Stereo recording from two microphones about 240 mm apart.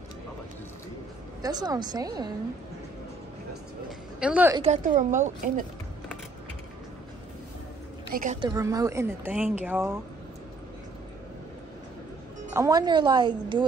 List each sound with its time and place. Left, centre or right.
1.4 s speech: centre
4.2 s speech: centre
4.6 s a woman's voice: right
8.1 s a woman's voice: right
8.4 s speech: centre
12.5 s a woman's voice: centre